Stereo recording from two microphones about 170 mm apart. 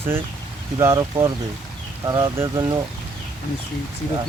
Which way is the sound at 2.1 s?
20° right (ahead or behind).